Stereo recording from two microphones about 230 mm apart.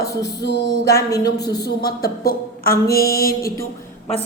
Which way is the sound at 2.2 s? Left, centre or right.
Left.